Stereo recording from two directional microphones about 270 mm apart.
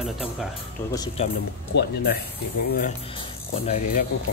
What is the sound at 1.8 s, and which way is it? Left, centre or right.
Speech, left.